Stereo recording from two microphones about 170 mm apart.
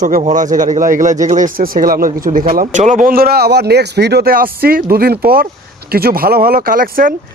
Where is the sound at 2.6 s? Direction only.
45° right (ahead or behind).